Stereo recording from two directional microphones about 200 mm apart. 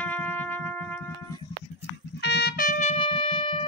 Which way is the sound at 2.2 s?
55° left (ahead or behind).